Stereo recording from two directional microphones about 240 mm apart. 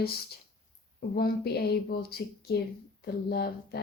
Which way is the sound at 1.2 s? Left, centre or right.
Left.